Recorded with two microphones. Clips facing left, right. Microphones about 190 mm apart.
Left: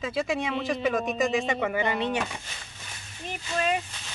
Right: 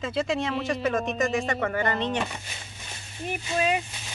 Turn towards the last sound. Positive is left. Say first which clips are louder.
# right 2 dB
turn(degrees=-10)  # may be behind; listen again after turning